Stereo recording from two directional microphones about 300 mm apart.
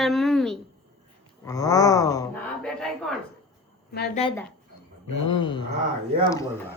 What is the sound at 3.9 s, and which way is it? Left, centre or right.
Speech, left.